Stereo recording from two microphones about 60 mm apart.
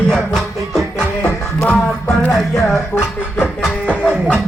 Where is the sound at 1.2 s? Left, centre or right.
Left.